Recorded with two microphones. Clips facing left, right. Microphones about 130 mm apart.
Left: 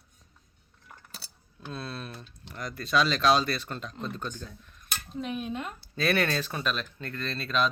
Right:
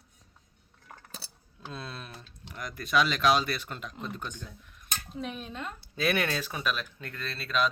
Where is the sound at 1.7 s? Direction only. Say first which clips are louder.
Left 4 dB; 15° right (ahead or behind).